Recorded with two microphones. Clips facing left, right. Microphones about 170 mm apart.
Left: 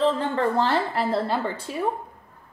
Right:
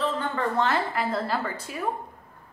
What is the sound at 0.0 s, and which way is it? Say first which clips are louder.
A woman's voice: left 5 dB; 30° left (ahead or behind).